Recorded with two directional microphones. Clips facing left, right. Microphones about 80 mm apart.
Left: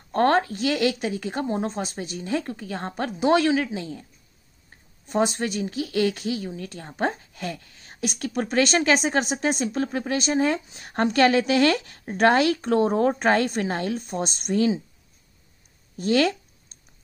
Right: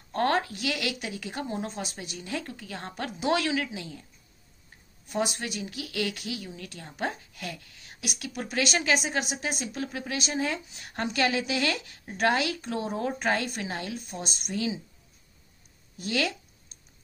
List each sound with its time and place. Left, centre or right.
0.1 s speech: left
5.0 s speech: left
16.0 s speech: left